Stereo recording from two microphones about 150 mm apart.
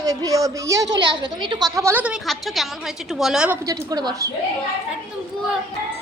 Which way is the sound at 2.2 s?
Centre (ahead or behind).